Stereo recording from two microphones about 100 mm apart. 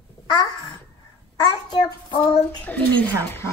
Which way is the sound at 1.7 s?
45° left (ahead or behind).